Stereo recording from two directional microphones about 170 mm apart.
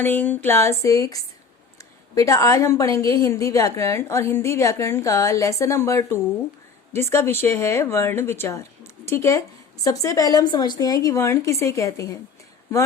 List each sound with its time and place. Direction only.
0.0 s a woman's voice: 10° left (ahead or behind)